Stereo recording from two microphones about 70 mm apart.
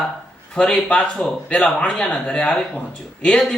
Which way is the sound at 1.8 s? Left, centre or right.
Centre.